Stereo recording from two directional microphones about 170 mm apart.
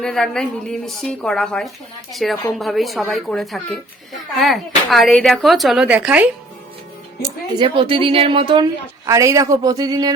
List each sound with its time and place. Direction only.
0.0 s speech: 5° left (ahead or behind)
7.2 s speech: 30° right (ahead or behind)
9.0 s speech: 20° right (ahead or behind)